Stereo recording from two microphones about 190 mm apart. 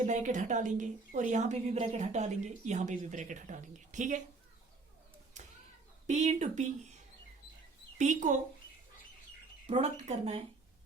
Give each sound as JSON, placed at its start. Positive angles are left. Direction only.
{"t": 0.0, "sound": "a woman's voice", "side_deg": -40}
{"t": 6.1, "sound": "a woman's voice", "side_deg": -35}
{"t": 7.9, "sound": "a woman's voice", "side_deg": -40}
{"t": 9.6, "sound": "a woman's voice", "side_deg": -35}